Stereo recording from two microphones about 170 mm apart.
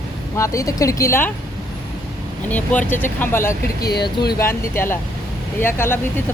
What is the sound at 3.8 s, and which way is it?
Speech, 70° left (ahead or behind).